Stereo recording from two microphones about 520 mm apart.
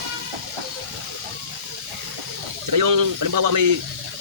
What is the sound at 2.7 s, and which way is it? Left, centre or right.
Speech, right.